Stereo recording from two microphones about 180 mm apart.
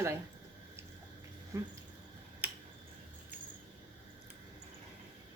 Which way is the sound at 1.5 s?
15° right (ahead or behind).